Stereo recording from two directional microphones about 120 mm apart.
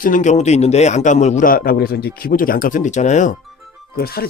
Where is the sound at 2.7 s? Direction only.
80° left.